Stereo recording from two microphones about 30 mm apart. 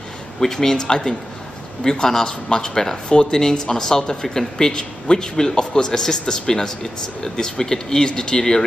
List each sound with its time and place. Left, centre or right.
0.4 s speech: centre
3.1 s speech: left
3.3 s speech: centre